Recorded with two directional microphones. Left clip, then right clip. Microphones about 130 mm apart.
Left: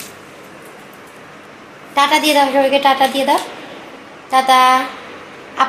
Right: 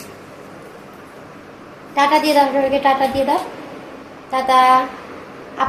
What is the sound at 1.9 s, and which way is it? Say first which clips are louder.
Speech: left 1 dB; 40° left (ahead or behind).